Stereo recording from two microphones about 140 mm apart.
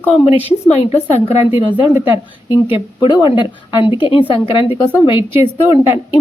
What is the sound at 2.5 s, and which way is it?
A woman's voice, 35° left (ahead or behind).